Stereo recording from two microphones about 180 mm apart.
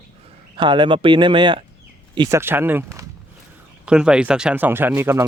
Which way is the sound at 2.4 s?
10° right (ahead or behind).